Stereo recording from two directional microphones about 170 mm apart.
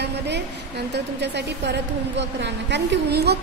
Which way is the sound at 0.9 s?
85° right.